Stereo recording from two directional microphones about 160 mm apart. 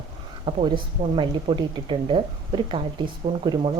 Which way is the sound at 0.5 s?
30° right (ahead or behind).